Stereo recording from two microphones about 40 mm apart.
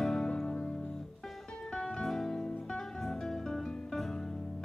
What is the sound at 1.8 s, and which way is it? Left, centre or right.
Music, centre.